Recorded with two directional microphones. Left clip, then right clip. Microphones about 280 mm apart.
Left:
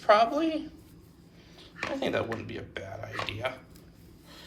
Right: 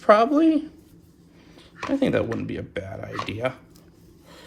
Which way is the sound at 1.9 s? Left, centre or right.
Right.